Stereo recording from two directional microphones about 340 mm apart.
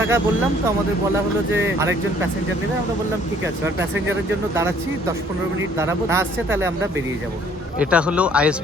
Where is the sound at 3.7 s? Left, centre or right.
Right.